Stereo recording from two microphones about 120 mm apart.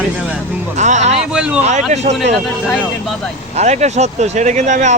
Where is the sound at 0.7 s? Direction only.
80° right.